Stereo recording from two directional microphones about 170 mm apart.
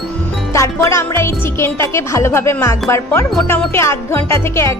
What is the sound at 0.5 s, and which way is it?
Music, 15° left (ahead or behind).